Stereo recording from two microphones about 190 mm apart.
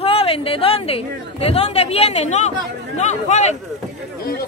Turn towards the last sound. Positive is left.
turn(degrees=35)  # may be behind; listen again after turning